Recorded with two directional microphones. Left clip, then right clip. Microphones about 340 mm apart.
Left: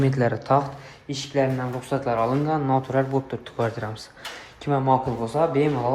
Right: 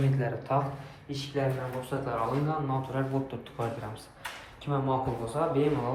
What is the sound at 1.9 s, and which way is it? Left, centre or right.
Speech, centre.